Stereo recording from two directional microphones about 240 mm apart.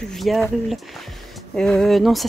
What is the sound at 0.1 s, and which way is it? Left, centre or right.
Speech, centre.